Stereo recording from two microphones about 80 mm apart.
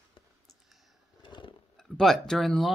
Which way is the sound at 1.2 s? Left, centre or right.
Left.